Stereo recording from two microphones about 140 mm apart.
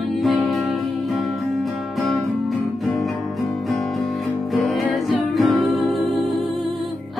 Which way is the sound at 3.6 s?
Centre (ahead or behind).